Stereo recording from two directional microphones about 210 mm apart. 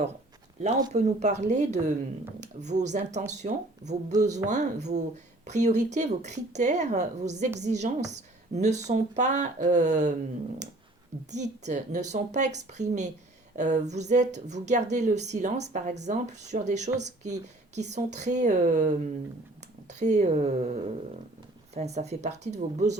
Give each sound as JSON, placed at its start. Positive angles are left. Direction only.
{"t": 0.9, "sound": "speech", "side_deg": -35}
{"t": 4.1, "sound": "speech", "side_deg": -15}
{"t": 4.4, "sound": "speech", "side_deg": -35}
{"t": 11.3, "sound": "speech", "side_deg": -35}